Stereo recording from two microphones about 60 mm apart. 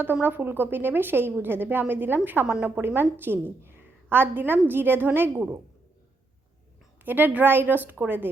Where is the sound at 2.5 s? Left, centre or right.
Right.